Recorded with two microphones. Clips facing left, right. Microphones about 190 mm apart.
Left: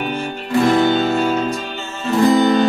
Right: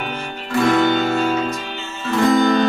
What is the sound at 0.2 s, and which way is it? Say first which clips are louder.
Guitar: left 2 dB; 30° left (ahead or behind).